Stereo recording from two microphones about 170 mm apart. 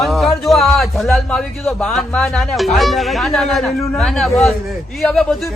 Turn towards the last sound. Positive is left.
turn(degrees=0)  # may be behind; listen again after turning